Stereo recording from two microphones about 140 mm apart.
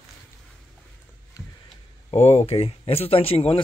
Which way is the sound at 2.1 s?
50° left (ahead or behind).